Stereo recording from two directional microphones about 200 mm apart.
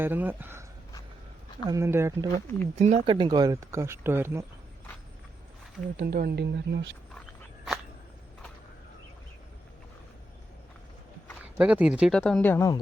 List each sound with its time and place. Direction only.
0.0 s speech: 10° right (ahead or behind)
1.6 s speech: 15° right (ahead or behind)
2.7 s speech: 35° right (ahead or behind)
3.2 s speech: 20° right (ahead or behind)
6.0 s speech: 50° right (ahead or behind)
11.5 s speech: 5° right (ahead or behind); by 12.8 s 15° left (ahead or behind)